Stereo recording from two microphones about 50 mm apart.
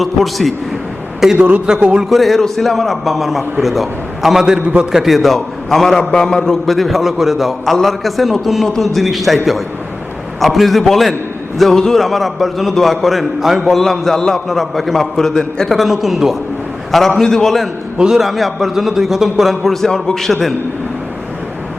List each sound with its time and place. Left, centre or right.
0.0 s a man's voice: centre
1.4 s a man's voice: right
1.6 s a man's voice: centre
2.0 s a man's voice: centre
4.6 s a man's voice: right
4.9 s a man's voice: centre
10.4 s a man's voice: centre
17.2 s a man's voice: centre
17.9 s a man's voice: centre
18.2 s a man's voice: centre